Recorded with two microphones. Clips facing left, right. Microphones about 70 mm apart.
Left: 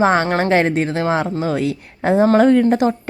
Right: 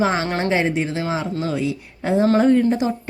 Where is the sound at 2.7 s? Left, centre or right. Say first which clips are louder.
Left 5 dB; left.